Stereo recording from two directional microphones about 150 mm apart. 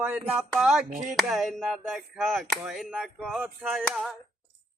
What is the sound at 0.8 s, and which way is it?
Speech, 55° right (ahead or behind).